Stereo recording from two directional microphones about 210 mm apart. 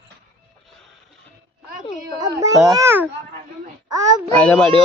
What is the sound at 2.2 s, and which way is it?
Speech, 15° right (ahead or behind).